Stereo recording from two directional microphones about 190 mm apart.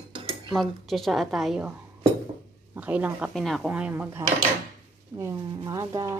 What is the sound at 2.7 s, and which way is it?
Speech, 10° right (ahead or behind).